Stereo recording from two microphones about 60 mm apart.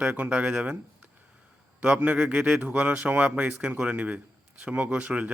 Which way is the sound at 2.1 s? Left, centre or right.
Centre.